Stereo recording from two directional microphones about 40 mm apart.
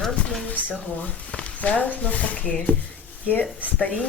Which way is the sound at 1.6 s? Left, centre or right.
Left.